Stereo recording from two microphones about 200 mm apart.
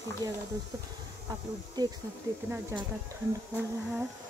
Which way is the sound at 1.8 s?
20° right (ahead or behind).